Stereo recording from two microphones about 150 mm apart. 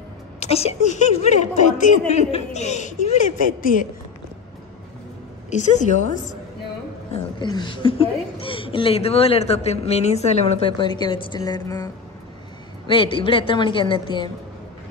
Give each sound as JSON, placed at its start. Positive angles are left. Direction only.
{"t": 0.4, "sound": "a woman's voice", "side_deg": 45}
{"t": 5.5, "sound": "a woman's voice", "side_deg": 50}
{"t": 7.3, "sound": "a woman's voice", "side_deg": 30}
{"t": 10.8, "sound": "a woman's voice", "side_deg": 30}
{"t": 12.8, "sound": "a woman's voice", "side_deg": 35}